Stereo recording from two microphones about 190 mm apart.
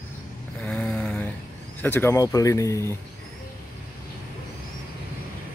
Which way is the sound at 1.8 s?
10° left (ahead or behind).